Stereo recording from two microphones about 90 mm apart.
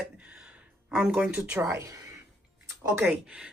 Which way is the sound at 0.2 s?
15° right (ahead or behind).